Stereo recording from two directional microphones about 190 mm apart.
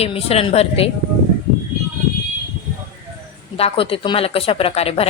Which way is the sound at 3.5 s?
30° left (ahead or behind).